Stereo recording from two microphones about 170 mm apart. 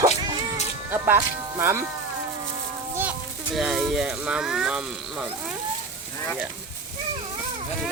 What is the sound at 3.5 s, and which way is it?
Speech, centre (ahead or behind).